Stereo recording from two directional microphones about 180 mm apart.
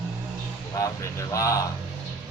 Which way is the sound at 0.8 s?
20° left (ahead or behind).